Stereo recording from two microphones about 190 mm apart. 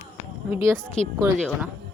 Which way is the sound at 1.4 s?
Centre (ahead or behind).